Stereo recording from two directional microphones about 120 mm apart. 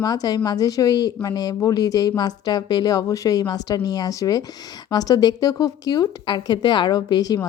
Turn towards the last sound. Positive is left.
turn(degrees=35)  # may be behind; listen again after turning